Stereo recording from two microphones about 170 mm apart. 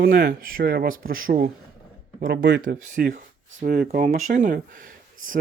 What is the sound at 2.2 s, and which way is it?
Speech, 75° right (ahead or behind).